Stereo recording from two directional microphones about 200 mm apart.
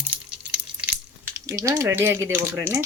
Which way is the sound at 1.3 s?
15° right (ahead or behind).